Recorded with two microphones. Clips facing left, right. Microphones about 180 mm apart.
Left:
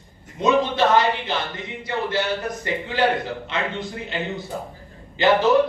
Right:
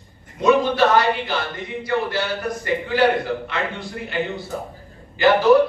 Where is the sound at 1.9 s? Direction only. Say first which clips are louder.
Right 1 dB; 20° left (ahead or behind).